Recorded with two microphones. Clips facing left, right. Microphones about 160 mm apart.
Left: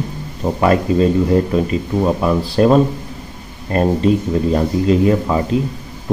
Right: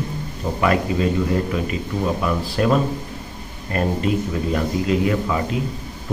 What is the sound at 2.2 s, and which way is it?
Speech, 35° left (ahead or behind).